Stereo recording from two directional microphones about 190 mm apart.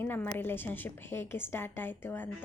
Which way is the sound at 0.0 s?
10° left (ahead or behind).